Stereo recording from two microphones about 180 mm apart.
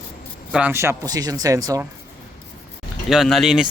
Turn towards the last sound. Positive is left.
turn(degrees=-5)  # may be behind; listen again after turning